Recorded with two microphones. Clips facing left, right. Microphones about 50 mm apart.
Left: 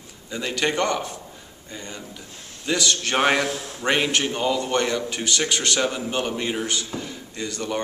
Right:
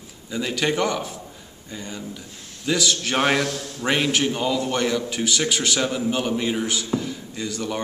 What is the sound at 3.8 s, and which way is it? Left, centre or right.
A man's voice, centre.